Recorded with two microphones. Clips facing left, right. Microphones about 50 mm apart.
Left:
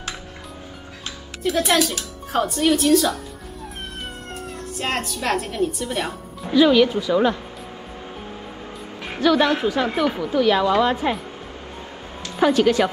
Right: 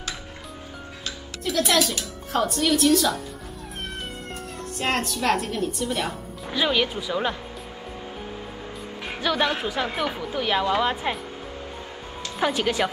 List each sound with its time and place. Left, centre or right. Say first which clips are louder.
1.4 s speech: left 3 dB; centre
4.7 s a woman's voice: even; centre
6.5 s a woman's voice: left 9 dB; centre
9.0 s a woman's voice: left 6 dB; centre
10.4 s a woman's voice: left 5 dB; centre
12.4 s a woman's voice: left 7 dB; centre